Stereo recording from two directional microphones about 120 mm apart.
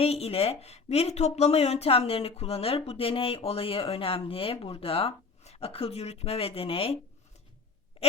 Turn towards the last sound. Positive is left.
turn(degrees=50)  # may be behind; listen again after turning